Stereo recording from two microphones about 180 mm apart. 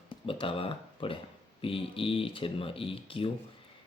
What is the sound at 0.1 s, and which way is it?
Speech, 30° left (ahead or behind).